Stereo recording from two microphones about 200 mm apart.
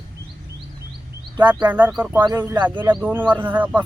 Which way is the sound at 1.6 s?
10° right (ahead or behind).